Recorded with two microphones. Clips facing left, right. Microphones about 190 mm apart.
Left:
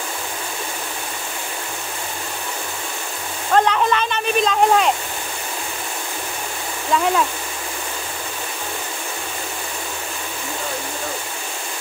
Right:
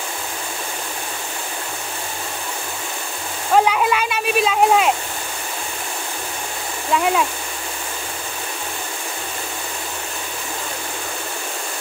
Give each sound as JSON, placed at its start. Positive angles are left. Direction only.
{"t": 3.5, "sound": "speech", "side_deg": -10}
{"t": 6.9, "sound": "speech", "side_deg": -5}